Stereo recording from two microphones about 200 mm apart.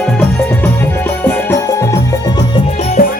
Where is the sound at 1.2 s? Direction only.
10° left (ahead or behind).